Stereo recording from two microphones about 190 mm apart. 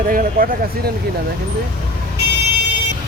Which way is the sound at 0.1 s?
45° right (ahead or behind).